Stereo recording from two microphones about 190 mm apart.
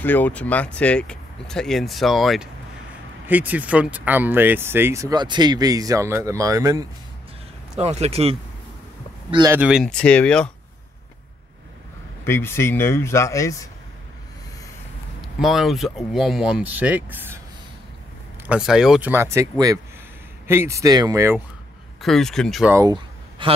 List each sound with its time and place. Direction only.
0.0 s speech: 10° left (ahead or behind); by 6.9 s 20° right (ahead or behind)
7.7 s speech: 35° right (ahead or behind)
9.5 s speech: 5° right (ahead or behind)
12.3 s speech: 15° left (ahead or behind)
15.2 s speech: centre (ahead or behind)
18.5 s speech: 5° right (ahead or behind)
22.0 s speech: centre (ahead or behind)
22.7 s speech: 15° right (ahead or behind)
23.4 s a man's voice: 25° right (ahead or behind)